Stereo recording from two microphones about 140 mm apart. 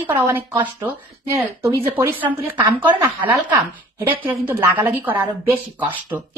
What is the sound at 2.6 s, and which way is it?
Speech, 35° right (ahead or behind).